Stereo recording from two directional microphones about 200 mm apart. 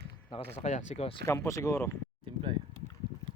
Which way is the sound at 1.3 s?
15° left (ahead or behind).